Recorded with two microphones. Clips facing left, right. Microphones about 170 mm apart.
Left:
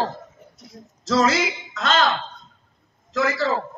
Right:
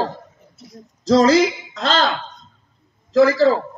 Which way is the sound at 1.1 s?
30° right (ahead or behind).